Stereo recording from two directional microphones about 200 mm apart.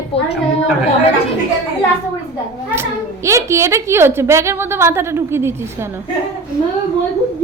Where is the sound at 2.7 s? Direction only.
15° right (ahead or behind).